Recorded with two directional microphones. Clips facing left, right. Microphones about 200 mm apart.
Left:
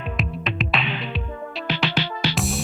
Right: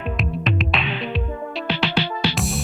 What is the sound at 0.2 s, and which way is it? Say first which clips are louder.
Music: right 2 dB; centre (ahead or behind).